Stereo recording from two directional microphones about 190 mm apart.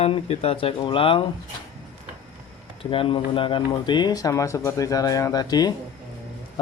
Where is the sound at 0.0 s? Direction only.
30° left (ahead or behind).